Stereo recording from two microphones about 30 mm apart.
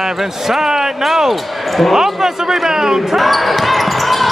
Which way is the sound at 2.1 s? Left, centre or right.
Centre.